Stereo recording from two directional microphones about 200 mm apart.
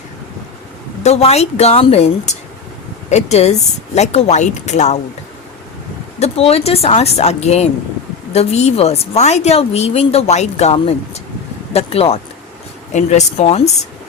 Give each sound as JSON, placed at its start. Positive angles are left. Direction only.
{"t": 1.0, "sound": "a woman's voice", "side_deg": 30}
{"t": 6.1, "sound": "a woman's voice", "side_deg": 30}